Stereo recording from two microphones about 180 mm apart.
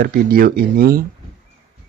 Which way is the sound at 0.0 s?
55° right (ahead or behind).